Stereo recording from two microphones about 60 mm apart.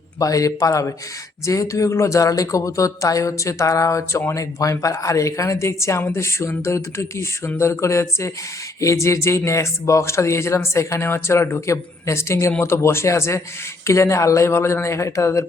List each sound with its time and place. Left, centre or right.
0.2 s speech: left